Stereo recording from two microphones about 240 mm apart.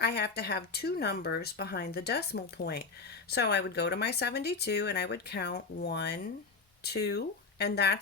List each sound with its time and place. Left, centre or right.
0.0 s speech: left